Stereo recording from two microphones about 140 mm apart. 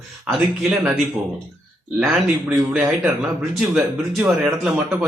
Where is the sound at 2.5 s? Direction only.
15° right (ahead or behind).